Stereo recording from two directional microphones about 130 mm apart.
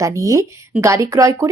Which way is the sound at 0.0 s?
25° right (ahead or behind).